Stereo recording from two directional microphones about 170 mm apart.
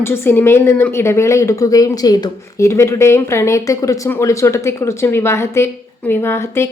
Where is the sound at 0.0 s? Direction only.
15° left (ahead or behind).